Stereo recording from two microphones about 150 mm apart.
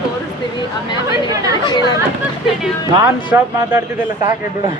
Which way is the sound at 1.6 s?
25° left (ahead or behind).